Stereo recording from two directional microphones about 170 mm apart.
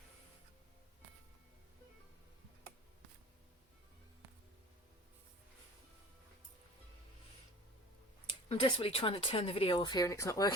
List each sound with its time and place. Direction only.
8.4 s speech: 30° left (ahead or behind)